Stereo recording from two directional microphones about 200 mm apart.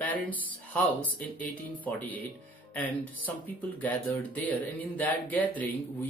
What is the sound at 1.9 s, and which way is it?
Speech, 10° left (ahead or behind).